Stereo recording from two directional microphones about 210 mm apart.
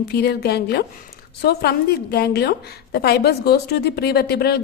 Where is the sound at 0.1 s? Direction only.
50° left (ahead or behind).